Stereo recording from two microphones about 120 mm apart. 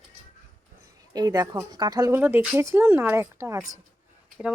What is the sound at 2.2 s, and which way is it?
Speech, 15° right (ahead or behind).